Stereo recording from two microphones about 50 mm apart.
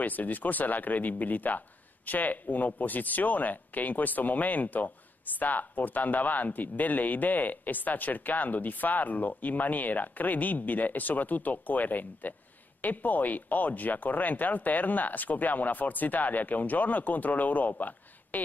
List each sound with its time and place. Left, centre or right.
0.0 s speech: left